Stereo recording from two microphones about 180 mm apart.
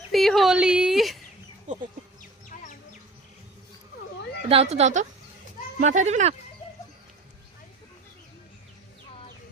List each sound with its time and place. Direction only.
0.1 s speech: centre (ahead or behind)
1.7 s speech: 40° right (ahead or behind)
4.4 s a woman's voice: 35° right (ahead or behind)